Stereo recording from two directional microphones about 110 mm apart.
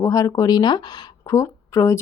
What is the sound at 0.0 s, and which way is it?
Speech, 30° left (ahead or behind).